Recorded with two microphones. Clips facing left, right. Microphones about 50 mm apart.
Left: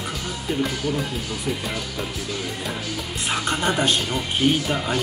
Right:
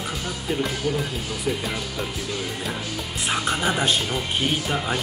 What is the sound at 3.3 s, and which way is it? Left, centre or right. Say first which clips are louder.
Speech: left 1 dB; centre.